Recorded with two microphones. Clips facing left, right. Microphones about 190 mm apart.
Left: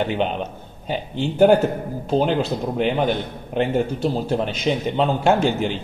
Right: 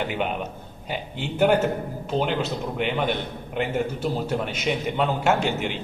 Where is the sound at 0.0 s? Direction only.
25° left (ahead or behind).